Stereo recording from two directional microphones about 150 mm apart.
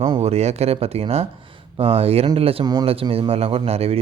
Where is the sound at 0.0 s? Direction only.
40° right (ahead or behind).